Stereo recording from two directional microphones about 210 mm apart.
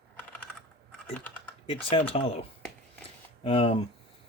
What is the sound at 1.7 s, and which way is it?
Speech, 25° left (ahead or behind).